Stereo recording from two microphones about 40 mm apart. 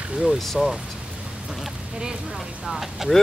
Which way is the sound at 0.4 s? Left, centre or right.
Centre.